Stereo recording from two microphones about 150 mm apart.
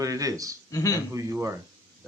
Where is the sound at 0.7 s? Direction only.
25° left (ahead or behind).